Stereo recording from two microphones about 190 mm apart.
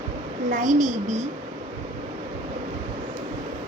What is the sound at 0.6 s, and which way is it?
Speech, 40° right (ahead or behind).